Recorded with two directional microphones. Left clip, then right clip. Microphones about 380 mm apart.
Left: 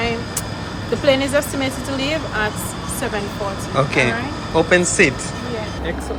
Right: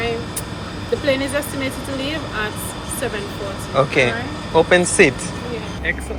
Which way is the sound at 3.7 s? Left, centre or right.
Centre.